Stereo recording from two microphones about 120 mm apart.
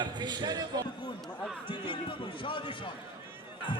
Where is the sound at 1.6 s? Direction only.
45° left (ahead or behind).